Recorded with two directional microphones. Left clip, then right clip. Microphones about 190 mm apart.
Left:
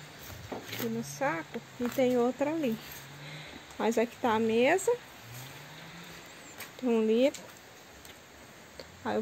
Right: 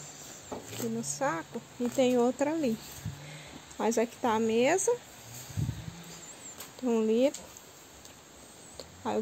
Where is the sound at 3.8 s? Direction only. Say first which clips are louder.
Even; centre (ahead or behind).